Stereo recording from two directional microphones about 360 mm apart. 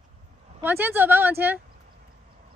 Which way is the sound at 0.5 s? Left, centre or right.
Centre.